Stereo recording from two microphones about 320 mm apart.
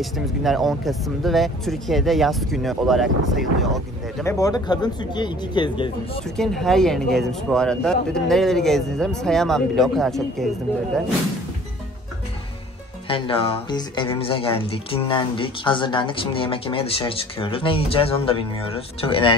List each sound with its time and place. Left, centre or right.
0.0 s speech: centre
6.2 s speech: centre
13.1 s speech: centre